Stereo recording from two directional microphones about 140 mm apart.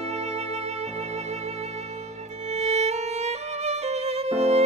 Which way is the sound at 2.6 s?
50° right (ahead or behind).